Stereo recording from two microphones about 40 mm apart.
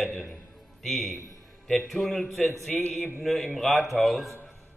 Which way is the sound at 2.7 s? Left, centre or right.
Left.